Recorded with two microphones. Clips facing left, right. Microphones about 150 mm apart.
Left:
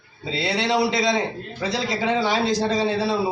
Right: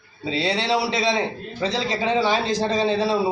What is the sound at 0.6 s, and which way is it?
Speech, 15° left (ahead or behind).